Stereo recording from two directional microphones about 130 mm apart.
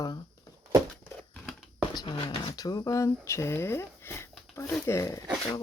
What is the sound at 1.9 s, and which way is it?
Speech, 40° left (ahead or behind).